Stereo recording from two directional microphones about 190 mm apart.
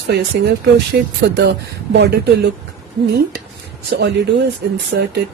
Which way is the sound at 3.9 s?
65° right (ahead or behind).